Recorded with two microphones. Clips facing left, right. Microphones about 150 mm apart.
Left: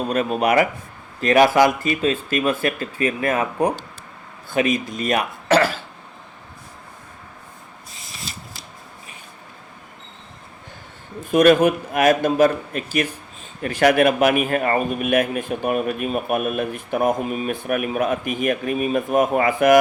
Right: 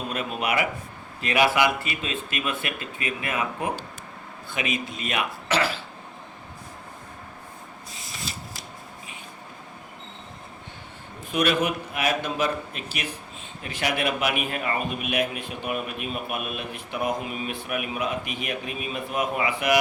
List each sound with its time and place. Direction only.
0.1 s a man's voice: 40° left (ahead or behind)
11.3 s a man's voice: 45° left (ahead or behind)